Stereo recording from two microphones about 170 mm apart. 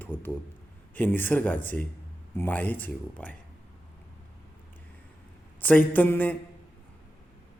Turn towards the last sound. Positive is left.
turn(degrees=10)  # may be behind; listen again after turning